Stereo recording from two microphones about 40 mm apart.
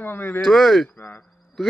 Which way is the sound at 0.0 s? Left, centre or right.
Left.